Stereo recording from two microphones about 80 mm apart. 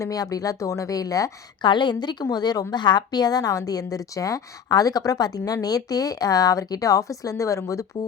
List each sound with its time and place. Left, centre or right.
0.0 s a woman's voice: left
1.6 s a woman's voice: left
2.7 s a woman's voice: left